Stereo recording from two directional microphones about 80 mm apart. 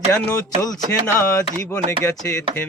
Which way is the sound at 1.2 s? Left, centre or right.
Left.